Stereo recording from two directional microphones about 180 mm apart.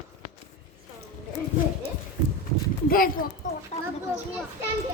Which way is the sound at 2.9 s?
55° left (ahead or behind).